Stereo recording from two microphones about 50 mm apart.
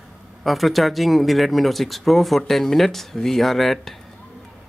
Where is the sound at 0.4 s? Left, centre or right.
Centre.